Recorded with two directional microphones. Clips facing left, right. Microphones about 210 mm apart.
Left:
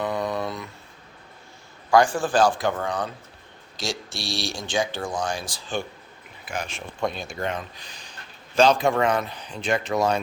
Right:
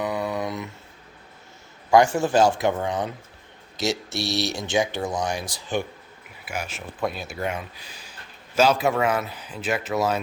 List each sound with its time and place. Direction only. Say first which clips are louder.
0.0 s a sound: even; 10° right (ahead or behind)
1.9 s speech: right 2 dB; 20° right (ahead or behind)
6.4 s speech: even; 10° right (ahead or behind)